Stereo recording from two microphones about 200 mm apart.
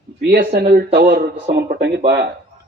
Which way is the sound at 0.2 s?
55° right (ahead or behind).